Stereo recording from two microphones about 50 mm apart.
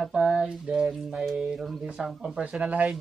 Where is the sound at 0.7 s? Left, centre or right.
Right.